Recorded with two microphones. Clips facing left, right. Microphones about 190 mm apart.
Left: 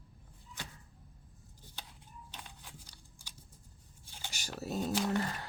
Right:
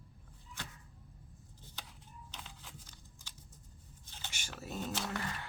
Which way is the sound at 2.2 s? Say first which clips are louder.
Even; 10° left (ahead or behind).